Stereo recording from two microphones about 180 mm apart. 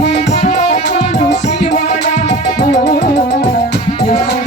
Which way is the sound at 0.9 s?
70° left (ahead or behind).